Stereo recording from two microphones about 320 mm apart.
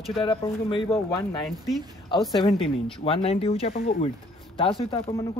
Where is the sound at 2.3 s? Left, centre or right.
Centre.